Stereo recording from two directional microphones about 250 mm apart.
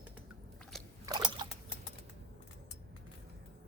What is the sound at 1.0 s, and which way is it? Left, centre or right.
Trickle, centre.